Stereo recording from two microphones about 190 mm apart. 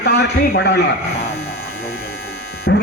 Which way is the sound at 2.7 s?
65° left (ahead or behind).